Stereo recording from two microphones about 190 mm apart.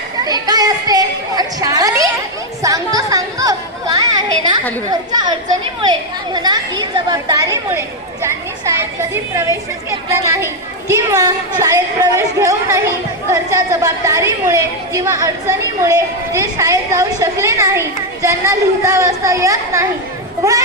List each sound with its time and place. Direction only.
0.3 s a sound: 20° right (ahead or behind)
2.6 s chatter: 20° right (ahead or behind)
5.8 s a woman's voice: 20° right (ahead or behind)